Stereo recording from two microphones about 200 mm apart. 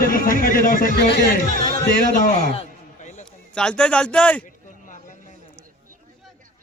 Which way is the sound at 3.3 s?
5° left (ahead or behind).